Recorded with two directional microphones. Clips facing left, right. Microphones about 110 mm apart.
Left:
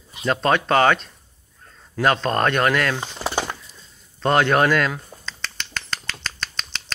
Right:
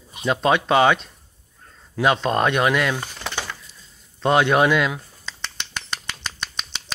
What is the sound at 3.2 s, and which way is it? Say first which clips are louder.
Bird: left 5 dB; 35° left (ahead or behind).